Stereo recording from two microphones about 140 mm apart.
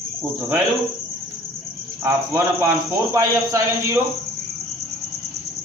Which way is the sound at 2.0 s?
15° right (ahead or behind).